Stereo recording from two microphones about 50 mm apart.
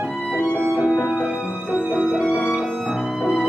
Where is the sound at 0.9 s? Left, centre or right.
Left.